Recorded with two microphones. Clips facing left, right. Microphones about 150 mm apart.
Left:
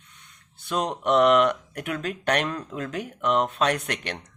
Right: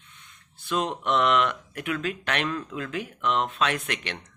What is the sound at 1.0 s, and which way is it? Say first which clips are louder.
Speech: left 6 dB; 45° left (ahead or behind).